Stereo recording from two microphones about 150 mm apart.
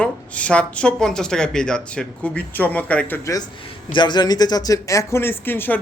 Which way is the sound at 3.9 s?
30° left (ahead or behind).